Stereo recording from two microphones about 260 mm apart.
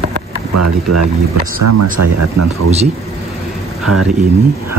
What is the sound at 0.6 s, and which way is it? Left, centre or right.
Speech, right.